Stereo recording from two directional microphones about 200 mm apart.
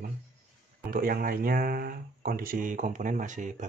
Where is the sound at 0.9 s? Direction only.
45° right (ahead or behind).